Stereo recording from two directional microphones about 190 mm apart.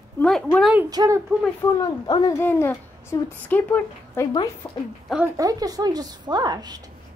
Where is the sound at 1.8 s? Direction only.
20° left (ahead or behind).